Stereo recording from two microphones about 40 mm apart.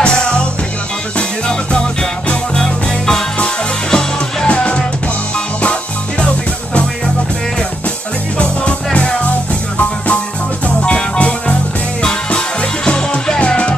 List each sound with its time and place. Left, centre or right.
0.0 s music: left
1.5 s music: centre
8.4 s music: left
10.7 s music: left